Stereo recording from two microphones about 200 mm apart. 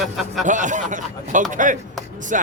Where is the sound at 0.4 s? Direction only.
40° right (ahead or behind).